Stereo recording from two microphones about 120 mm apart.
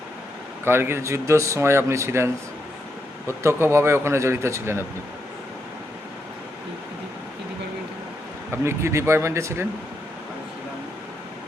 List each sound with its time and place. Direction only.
0.6 s speech: 20° right (ahead or behind)
8.6 s speech: 20° right (ahead or behind)